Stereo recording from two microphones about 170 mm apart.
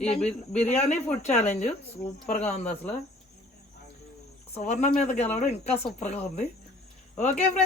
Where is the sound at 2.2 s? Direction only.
45° left (ahead or behind).